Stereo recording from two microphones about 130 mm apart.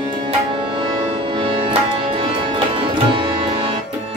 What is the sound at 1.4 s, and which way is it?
Tabla, 40° right (ahead or behind).